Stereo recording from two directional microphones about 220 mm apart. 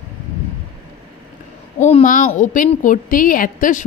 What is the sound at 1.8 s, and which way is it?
A woman's voice, 30° left (ahead or behind).